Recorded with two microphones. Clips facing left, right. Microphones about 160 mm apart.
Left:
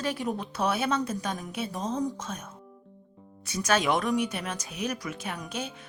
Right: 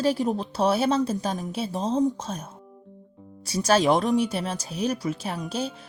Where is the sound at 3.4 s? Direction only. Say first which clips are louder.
Right 5 dB; 35° right (ahead or behind).